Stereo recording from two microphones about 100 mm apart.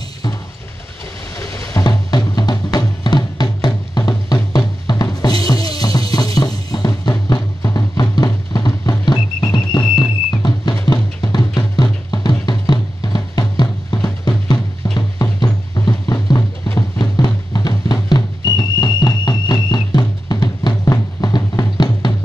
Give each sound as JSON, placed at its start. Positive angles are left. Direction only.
{"t": 1.4, "sound": "music", "side_deg": 35}